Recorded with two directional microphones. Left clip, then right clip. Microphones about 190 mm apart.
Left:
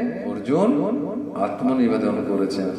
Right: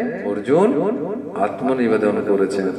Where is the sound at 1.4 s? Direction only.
25° right (ahead or behind).